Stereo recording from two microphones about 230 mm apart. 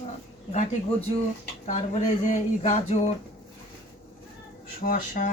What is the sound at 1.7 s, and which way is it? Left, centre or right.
Speech, left.